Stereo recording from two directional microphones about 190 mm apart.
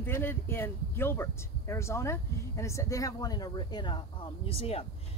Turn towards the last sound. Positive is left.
turn(degrees=30)  # may be behind; listen again after turning